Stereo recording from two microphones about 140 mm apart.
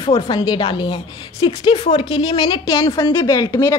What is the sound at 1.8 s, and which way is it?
Speech, 50° left (ahead or behind).